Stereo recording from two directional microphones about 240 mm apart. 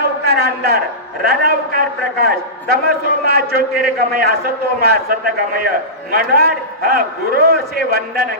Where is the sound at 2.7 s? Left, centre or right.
Right.